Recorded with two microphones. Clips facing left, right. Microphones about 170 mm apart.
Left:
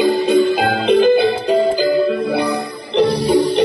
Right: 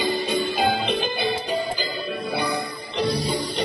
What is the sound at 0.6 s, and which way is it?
Music, 90° left.